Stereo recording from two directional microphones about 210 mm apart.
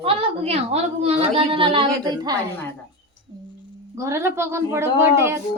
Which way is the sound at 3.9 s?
15° right (ahead or behind).